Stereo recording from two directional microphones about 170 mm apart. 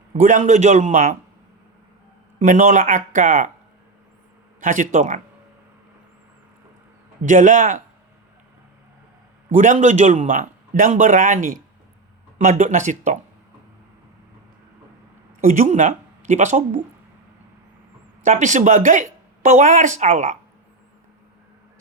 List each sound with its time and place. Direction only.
0.1 s speech: 45° right (ahead or behind)
2.4 s speech: 45° right (ahead or behind)
4.6 s speech: 50° right (ahead or behind)
7.3 s speech: 50° right (ahead or behind)
9.6 s speech: 45° right (ahead or behind)
15.4 s speech: 45° right (ahead or behind)
18.2 s a woman's voice: 45° right (ahead or behind)